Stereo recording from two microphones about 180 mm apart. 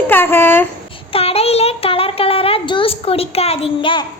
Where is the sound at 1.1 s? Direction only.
35° left (ahead or behind).